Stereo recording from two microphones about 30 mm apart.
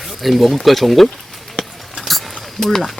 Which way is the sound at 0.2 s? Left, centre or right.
Centre.